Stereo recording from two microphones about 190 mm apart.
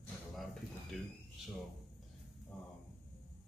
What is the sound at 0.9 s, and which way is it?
Speech, centre (ahead or behind).